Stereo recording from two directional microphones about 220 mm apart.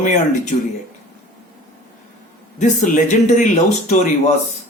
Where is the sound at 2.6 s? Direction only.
35° left (ahead or behind).